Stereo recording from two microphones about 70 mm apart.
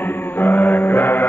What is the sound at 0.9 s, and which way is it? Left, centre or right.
Music, left.